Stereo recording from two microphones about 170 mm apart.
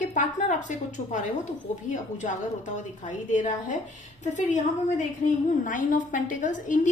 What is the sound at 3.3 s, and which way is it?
Speech, 45° left (ahead or behind).